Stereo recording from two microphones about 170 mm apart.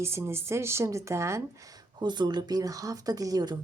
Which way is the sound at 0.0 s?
15° right (ahead or behind).